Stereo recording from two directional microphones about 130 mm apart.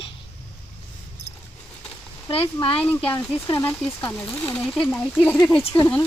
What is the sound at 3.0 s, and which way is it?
Speech, 15° left (ahead or behind).